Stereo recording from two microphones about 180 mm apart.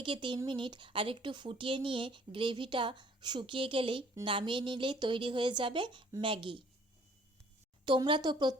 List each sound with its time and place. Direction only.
0.0 s speech: 30° right (ahead or behind)
7.9 s speech: 25° right (ahead or behind)